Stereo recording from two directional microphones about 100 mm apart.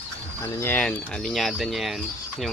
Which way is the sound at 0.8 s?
5° left (ahead or behind).